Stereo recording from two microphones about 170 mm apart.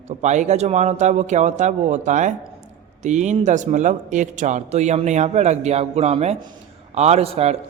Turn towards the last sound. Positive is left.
turn(degrees=-35)  # may be behind; listen again after turning